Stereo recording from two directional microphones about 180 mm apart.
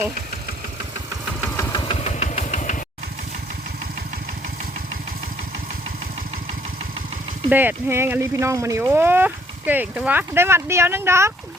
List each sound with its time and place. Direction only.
1.5 s engine: 25° left (ahead or behind); by 2.8 s 45° left (ahead or behind)
7.5 s speech: 10° right (ahead or behind)